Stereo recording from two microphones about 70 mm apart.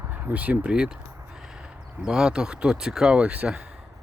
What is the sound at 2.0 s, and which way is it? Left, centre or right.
Speech, centre.